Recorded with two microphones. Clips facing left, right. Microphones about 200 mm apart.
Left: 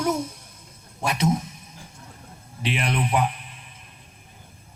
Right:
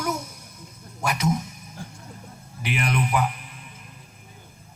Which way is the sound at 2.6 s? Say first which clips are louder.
Even; 30° left (ahead or behind).